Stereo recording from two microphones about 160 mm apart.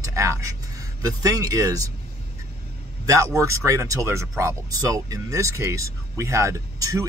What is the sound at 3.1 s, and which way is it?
Speech, 20° right (ahead or behind).